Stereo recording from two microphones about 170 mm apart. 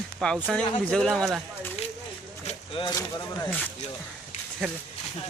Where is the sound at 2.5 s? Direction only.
30° left (ahead or behind).